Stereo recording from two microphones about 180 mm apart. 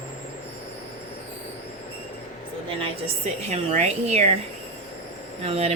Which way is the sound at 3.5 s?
35° right (ahead or behind).